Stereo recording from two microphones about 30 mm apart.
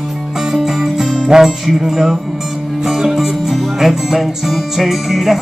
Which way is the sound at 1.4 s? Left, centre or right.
Centre.